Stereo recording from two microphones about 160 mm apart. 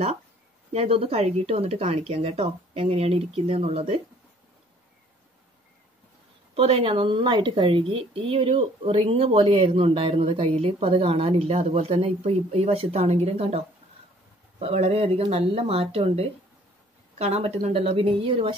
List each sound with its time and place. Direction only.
0.7 s speech: 35° right (ahead or behind)
6.5 s speech: 35° right (ahead or behind)
14.6 s speech: 40° right (ahead or behind)